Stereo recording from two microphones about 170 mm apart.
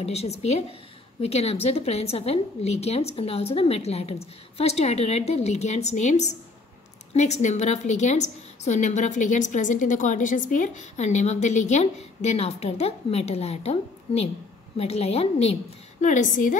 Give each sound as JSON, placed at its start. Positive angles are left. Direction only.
{"t": 0.0, "sound": "a woman's voice", "side_deg": 40}